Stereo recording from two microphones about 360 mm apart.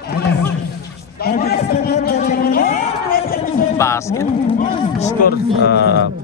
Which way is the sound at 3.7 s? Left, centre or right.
Centre.